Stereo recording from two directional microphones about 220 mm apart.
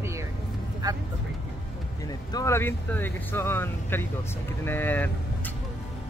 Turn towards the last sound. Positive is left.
turn(degrees=10)  # may be behind; listen again after turning